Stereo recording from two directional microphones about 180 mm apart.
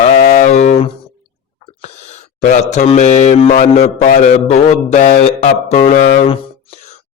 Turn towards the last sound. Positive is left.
turn(degrees=35)  # may be behind; listen again after turning